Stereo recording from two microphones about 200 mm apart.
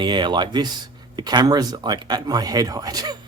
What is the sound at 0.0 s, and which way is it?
Speech, 20° right (ahead or behind).